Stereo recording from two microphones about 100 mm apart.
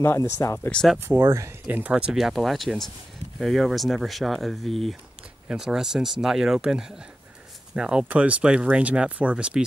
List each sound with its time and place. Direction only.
0.0 s speech: 25° left (ahead or behind)
0.9 s speech: 25° right (ahead or behind)
1.7 s speech: 15° right (ahead or behind)